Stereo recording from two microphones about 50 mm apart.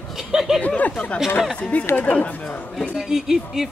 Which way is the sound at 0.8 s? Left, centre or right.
Left.